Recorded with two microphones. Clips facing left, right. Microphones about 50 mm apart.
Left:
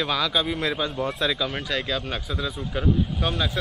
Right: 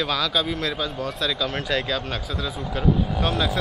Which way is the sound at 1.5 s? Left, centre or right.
Centre.